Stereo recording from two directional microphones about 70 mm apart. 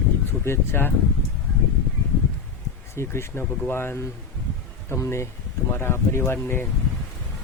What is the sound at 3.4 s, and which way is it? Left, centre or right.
Speech, centre.